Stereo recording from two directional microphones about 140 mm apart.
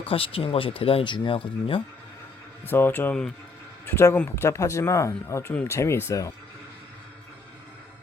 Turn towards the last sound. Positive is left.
turn(degrees=20)  # may be behind; listen again after turning